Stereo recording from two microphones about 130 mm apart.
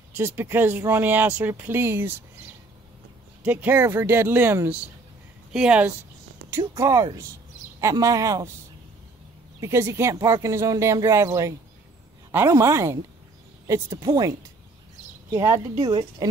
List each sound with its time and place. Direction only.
0.1 s speech: 15° right (ahead or behind)
3.4 s speech: 15° right (ahead or behind)
6.6 s speech: 30° right (ahead or behind)
9.6 s speech: 20° right (ahead or behind)
15.3 s speech: 25° right (ahead or behind)
15.8 s speech: 40° right (ahead or behind)